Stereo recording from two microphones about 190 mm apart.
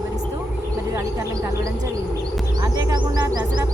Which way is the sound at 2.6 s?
20° right (ahead or behind).